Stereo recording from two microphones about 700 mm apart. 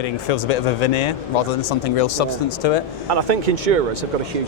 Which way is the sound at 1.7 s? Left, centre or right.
Left.